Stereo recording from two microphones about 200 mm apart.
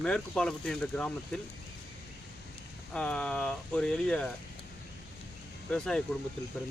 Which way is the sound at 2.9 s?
5° left (ahead or behind).